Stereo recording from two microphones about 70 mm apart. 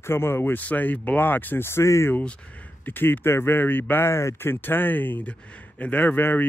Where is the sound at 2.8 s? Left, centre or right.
Left.